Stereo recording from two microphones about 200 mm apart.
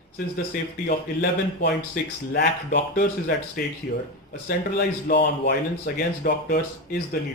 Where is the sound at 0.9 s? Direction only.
55° left (ahead or behind).